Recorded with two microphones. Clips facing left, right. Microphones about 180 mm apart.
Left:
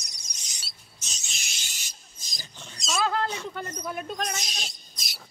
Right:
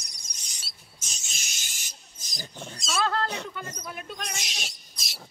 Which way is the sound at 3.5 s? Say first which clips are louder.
Left 5 dB; 40° left (ahead or behind).